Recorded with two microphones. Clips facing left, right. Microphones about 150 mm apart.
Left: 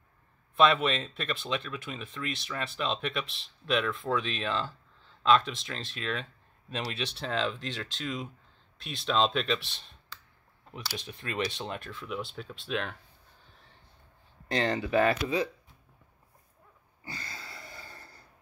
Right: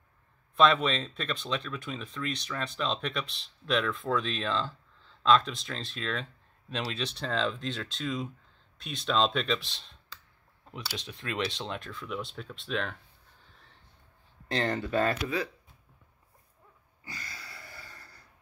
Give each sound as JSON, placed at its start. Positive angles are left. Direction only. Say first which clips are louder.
{"t": 0.6, "sound": "speech", "louder": "even", "side_deg": 5}
{"t": 14.6, "sound": "speech", "louder": "left 2 dB", "side_deg": 20}
{"t": 17.0, "sound": "a sound", "louder": "left 2 dB", "side_deg": 25}